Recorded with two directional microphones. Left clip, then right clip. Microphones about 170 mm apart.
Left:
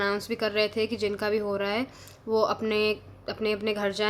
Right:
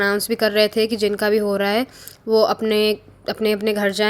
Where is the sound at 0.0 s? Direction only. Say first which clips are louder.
Right 9 dB; 40° right (ahead or behind).